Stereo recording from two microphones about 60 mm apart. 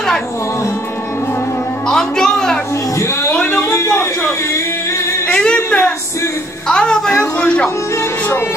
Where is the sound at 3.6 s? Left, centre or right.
Left.